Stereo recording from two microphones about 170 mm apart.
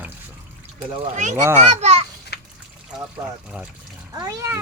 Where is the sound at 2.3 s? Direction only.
75° left (ahead or behind).